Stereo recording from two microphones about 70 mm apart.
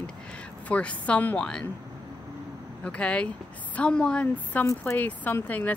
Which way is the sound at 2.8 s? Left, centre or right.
Centre.